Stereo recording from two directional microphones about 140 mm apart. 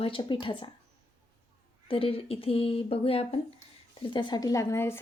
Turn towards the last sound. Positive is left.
turn(degrees=20)  # may be behind; listen again after turning